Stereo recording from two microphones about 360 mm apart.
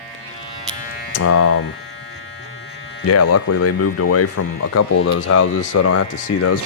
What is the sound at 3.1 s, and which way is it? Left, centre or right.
Speech, left.